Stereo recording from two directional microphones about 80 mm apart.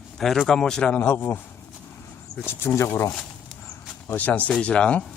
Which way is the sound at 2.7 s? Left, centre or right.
Left.